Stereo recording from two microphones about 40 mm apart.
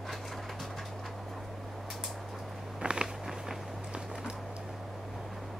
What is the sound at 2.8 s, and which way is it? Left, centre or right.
Biting, right.